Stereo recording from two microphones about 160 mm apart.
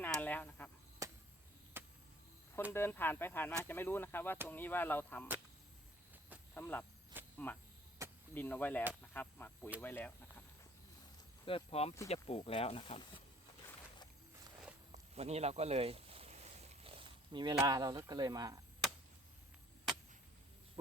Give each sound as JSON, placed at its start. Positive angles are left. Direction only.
{"t": 0.0, "sound": "a sound", "side_deg": 10}
{"t": 1.0, "sound": "chop", "side_deg": -20}
{"t": 2.7, "sound": "speech", "side_deg": 15}
{"t": 6.5, "sound": "speech", "side_deg": 10}
{"t": 11.4, "sound": "speech", "side_deg": 35}
{"t": 14.9, "sound": "boat", "side_deg": -40}
{"t": 17.7, "sound": "speech", "side_deg": -20}